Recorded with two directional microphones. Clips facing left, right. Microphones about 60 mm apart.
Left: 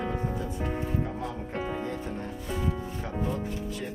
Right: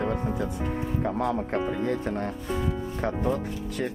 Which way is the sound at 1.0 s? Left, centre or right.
Right.